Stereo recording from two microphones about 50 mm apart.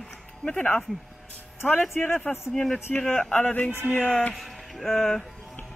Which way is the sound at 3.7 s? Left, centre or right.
Right.